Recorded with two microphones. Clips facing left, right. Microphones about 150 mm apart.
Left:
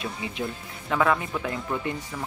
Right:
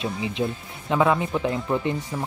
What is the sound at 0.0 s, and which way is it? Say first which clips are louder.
Speech: right 5 dB; 20° right (ahead or behind).